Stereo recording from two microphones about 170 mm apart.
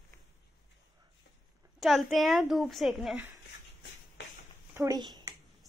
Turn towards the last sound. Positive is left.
turn(degrees=-20)  # may be behind; listen again after turning